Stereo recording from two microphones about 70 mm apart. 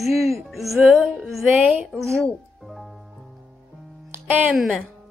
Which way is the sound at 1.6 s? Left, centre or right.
Centre.